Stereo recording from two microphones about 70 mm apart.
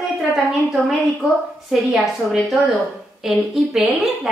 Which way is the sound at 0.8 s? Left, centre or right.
Centre.